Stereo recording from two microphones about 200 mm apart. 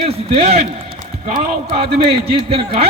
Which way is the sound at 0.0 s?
30° right (ahead or behind).